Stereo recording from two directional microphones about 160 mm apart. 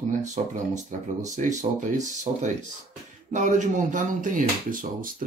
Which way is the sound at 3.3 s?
50° right (ahead or behind).